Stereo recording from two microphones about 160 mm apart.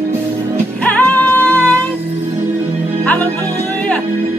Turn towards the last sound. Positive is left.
turn(degrees=10)  # may be behind; listen again after turning